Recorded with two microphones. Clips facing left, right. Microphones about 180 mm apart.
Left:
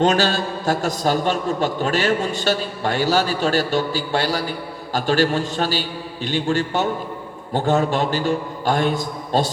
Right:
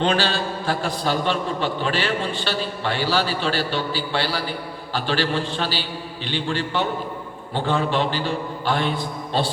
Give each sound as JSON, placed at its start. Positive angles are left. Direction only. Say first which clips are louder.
{"t": 0.0, "sound": "a man's voice", "louder": "left 3 dB", "side_deg": 45}